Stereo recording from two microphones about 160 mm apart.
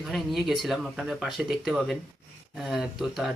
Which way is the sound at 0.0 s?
Centre (ahead or behind).